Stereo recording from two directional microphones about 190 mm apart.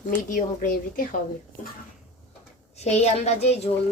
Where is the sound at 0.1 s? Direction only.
45° left (ahead or behind).